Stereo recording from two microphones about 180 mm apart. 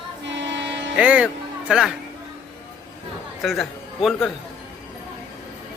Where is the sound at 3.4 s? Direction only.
Centre (ahead or behind).